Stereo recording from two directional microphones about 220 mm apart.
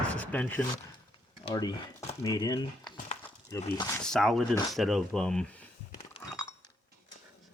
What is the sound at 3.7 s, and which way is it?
Speech, 10° left (ahead or behind).